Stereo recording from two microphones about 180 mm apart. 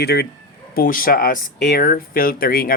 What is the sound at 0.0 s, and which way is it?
Speech, 60° left (ahead or behind).